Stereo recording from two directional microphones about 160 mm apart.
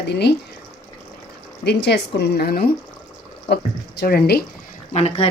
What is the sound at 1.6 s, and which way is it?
Speech, 90° left.